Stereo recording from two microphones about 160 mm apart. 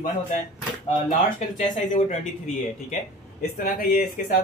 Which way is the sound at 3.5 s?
60° left (ahead or behind).